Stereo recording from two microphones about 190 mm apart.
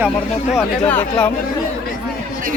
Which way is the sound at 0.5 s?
10° left (ahead or behind).